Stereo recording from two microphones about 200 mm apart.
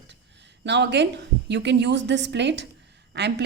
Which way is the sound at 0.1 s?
60° right (ahead or behind).